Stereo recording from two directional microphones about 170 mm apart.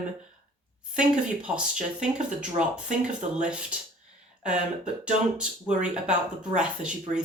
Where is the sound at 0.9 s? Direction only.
5° right (ahead or behind).